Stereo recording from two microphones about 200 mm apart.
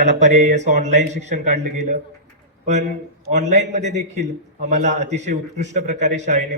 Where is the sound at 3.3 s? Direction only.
35° right (ahead or behind).